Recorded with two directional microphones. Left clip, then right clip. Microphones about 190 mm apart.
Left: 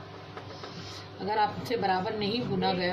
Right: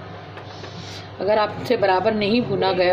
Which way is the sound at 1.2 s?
40° right (ahead or behind).